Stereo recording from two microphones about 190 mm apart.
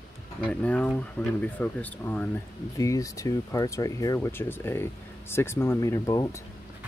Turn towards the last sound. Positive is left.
turn(degrees=15)  # may be behind; listen again after turning